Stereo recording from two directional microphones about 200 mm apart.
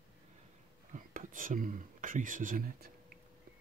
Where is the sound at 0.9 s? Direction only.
40° right (ahead or behind).